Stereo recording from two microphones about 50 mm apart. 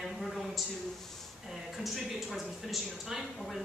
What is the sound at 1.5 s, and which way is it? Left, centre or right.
Speech, centre.